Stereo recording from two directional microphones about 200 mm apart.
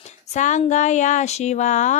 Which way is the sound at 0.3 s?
35° left (ahead or behind).